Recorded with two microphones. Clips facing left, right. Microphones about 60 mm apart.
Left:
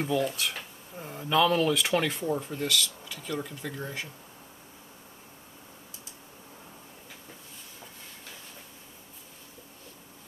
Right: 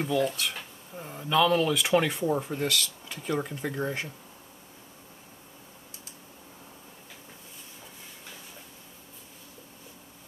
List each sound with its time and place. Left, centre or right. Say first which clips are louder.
0.0 s speech: right 1 dB; centre
2.3 s speech: right 3 dB; centre
2.6 s speech: even; right